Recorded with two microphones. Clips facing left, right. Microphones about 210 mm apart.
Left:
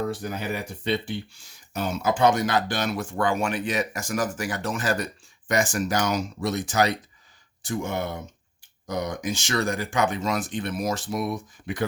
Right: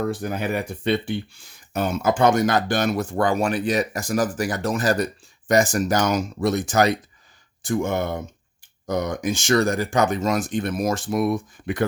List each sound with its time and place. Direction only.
0.1 s speech: 55° right (ahead or behind)